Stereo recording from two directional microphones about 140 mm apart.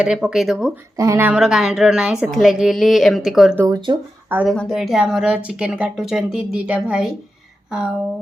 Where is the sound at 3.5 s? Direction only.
20° right (ahead or behind).